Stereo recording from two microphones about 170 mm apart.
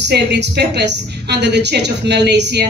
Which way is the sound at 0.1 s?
80° right.